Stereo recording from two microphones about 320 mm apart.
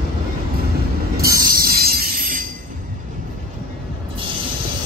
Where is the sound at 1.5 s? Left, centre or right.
Right.